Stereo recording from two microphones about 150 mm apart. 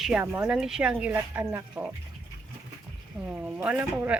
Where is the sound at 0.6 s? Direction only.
5° right (ahead or behind).